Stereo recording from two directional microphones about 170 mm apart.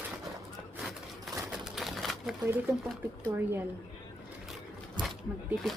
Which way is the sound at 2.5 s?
15° right (ahead or behind).